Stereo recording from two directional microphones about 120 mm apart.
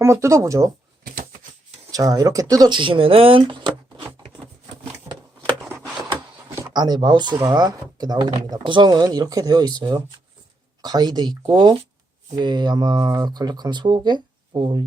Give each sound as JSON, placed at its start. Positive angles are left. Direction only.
{"t": 0.0, "sound": "speech", "side_deg": -25}
{"t": 1.9, "sound": "speech", "side_deg": -30}
{"t": 5.6, "sound": "a sound", "side_deg": -10}
{"t": 6.7, "sound": "speech", "side_deg": -35}